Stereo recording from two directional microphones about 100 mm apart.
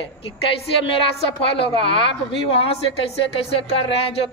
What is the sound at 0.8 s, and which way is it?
Speech, 65° left (ahead or behind).